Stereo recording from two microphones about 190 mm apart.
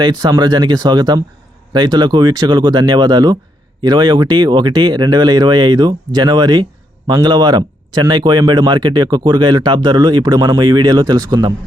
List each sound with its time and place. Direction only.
0.0 s speech: 20° right (ahead or behind)